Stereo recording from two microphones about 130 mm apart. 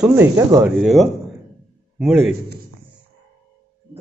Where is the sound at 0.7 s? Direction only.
Centre (ahead or behind).